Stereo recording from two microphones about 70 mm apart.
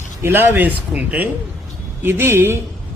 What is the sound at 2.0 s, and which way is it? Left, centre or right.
Speech, right.